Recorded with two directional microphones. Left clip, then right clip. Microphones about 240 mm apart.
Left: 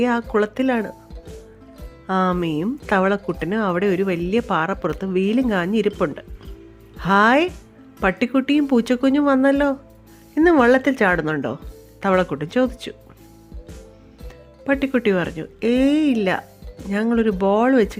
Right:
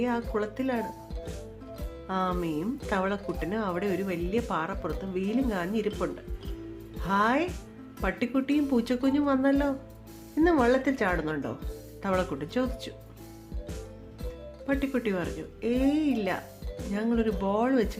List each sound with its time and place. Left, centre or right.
0.0 s speech: left
2.0 s speech: left
7.0 s speech: left
14.7 s speech: left